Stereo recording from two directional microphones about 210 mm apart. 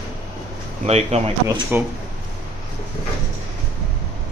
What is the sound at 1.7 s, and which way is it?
Speech, 10° right (ahead or behind).